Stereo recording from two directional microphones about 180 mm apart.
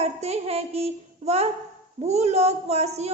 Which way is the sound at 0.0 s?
35° right (ahead or behind).